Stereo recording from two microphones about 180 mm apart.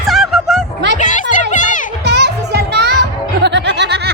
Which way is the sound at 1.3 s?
45° left (ahead or behind).